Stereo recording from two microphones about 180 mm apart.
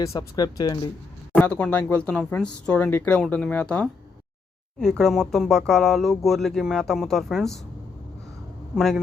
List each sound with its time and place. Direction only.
0.0 s speech: 20° left (ahead or behind)
1.4 s speech: 5° left (ahead or behind)
8.7 s speech: centre (ahead or behind)